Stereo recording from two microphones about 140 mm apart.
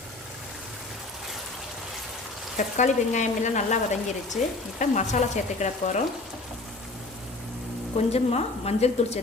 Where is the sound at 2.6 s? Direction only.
60° left (ahead or behind).